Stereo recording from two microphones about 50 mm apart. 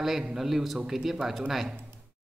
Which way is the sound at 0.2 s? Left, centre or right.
Centre.